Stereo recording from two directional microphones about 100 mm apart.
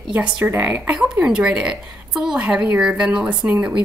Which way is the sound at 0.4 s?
15° right (ahead or behind).